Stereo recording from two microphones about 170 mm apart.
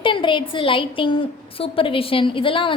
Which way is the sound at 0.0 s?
30° left (ahead or behind).